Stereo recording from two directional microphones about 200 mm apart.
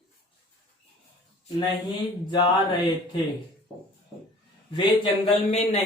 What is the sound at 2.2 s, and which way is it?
Speech, 25° left (ahead or behind).